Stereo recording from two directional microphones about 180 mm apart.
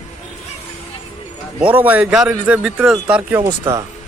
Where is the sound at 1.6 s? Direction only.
10° right (ahead or behind).